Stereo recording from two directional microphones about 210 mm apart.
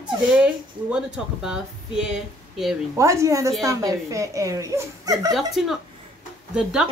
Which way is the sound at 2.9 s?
15° right (ahead or behind).